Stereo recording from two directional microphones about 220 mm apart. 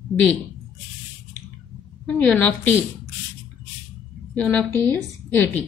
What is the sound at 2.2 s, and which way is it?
Speech, 5° left (ahead or behind).